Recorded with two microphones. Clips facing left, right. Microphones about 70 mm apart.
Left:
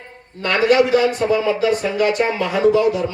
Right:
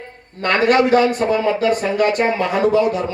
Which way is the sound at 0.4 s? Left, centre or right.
Right.